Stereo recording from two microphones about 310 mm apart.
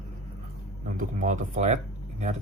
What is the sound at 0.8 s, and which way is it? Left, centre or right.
Speech, right.